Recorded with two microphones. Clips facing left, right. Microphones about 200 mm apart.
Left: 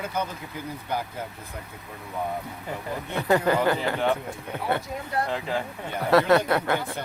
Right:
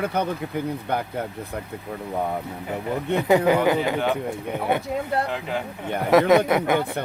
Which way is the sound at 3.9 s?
5° right (ahead or behind).